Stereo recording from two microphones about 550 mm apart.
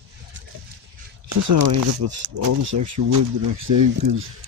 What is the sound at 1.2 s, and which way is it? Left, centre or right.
Speech, right.